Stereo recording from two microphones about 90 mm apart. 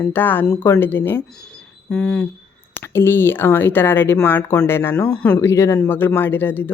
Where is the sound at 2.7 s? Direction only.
25° left (ahead or behind).